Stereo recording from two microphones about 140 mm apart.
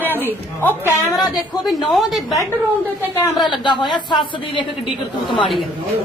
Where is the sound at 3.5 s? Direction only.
35° left (ahead or behind).